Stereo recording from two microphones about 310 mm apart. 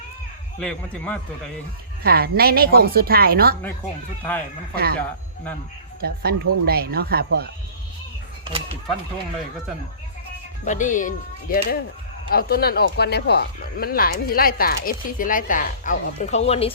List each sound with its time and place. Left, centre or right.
0.6 s a man's voice: centre
2.0 s a woman's voice: right
4.7 s a woman's voice: right
6.0 s speech: right
10.7 s speech: left